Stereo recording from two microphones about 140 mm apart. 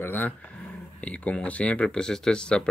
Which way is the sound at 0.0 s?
15° left (ahead or behind).